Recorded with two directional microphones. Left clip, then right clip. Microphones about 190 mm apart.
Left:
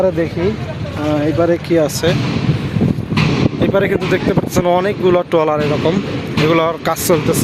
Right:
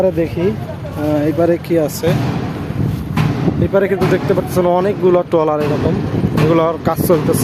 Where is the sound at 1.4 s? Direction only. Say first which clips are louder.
Left 2 dB; 10° right (ahead or behind).